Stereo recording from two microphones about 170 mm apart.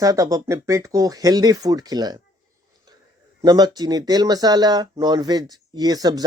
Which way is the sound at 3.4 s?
25° right (ahead or behind).